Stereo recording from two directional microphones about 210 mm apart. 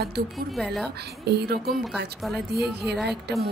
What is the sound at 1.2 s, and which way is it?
Speech, 50° right (ahead or behind).